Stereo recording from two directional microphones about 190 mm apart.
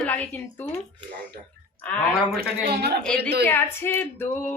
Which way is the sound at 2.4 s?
55° right (ahead or behind).